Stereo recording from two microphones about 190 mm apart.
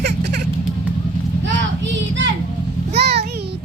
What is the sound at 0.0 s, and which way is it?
Vehicle, 60° right (ahead or behind).